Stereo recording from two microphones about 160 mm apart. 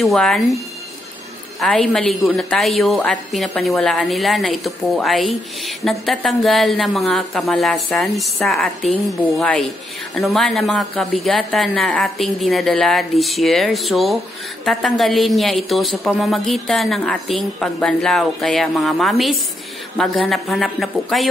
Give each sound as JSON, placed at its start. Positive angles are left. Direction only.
{"t": 0.0, "sound": "a woman's voice", "side_deg": 0}
{"t": 1.6, "sound": "a woman's voice", "side_deg": 5}